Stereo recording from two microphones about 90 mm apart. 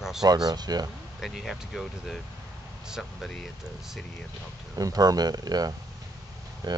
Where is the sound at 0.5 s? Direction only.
50° right (ahead or behind).